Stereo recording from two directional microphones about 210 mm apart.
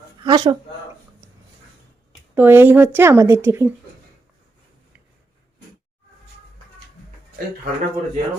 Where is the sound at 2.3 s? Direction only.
10° right (ahead or behind).